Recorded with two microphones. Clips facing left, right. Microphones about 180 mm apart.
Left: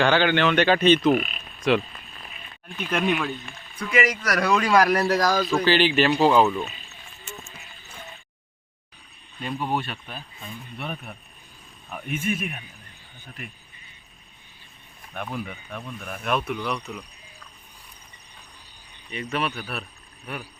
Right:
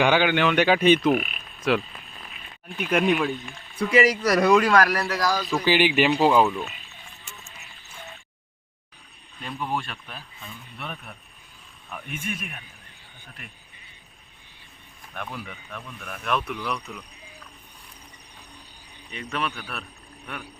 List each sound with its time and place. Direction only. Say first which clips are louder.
0.0 s speech: even; 10° right (ahead or behind)
3.8 s speech: right 4 dB; 35° right (ahead or behind)
5.0 s speech: left 4 dB; 45° left (ahead or behind)
5.5 s speech: left 1 dB; 10° right (ahead or behind)
9.5 s speech: left 2 dB; 25° left (ahead or behind)
9.8 s speech: left 3 dB; centre (ahead or behind)
12.1 s speech: left 7 dB; 5° left (ahead or behind)
15.1 s speech: left 4 dB; 10° left (ahead or behind)
19.1 s speech: left 3 dB; 5° left (ahead or behind)